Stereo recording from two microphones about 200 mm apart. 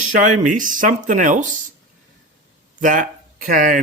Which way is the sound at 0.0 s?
40° right (ahead or behind).